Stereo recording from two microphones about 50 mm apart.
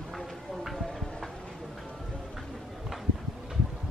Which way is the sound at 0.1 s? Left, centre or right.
Centre.